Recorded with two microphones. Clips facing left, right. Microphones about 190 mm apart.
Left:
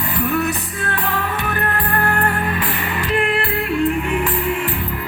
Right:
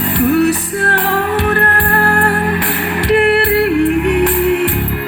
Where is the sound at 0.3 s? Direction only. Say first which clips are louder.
Right 10 dB; 70° right (ahead or behind).